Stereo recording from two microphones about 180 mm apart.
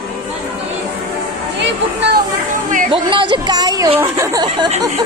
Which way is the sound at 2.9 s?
30° right (ahead or behind).